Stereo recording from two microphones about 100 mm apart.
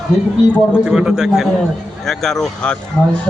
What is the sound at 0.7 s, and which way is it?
A man's voice, 10° right (ahead or behind).